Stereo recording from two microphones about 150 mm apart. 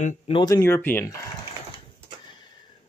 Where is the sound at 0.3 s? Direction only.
25° left (ahead or behind).